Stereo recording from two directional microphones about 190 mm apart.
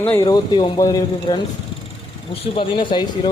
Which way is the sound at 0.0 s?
10° left (ahead or behind).